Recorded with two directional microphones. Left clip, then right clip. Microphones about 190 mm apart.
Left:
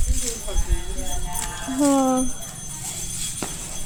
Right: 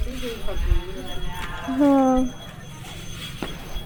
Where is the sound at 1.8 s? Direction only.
5° right (ahead or behind).